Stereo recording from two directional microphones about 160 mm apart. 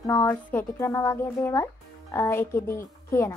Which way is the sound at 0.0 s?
15° left (ahead or behind).